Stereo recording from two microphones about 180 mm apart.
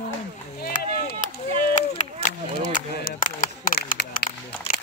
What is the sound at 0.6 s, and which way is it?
Chop, 60° left (ahead or behind).